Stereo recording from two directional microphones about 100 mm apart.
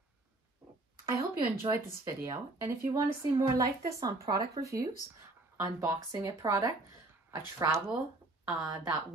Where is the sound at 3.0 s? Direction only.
40° right (ahead or behind).